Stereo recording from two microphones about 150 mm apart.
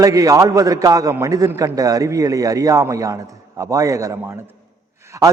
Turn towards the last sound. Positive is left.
turn(degrees=-20)  # may be behind; listen again after turning